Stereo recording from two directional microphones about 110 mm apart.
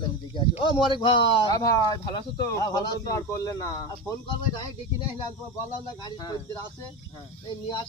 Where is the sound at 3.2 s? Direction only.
25° left (ahead or behind).